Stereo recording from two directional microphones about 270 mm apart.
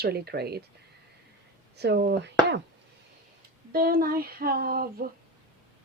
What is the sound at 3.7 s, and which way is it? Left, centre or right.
Speech, right.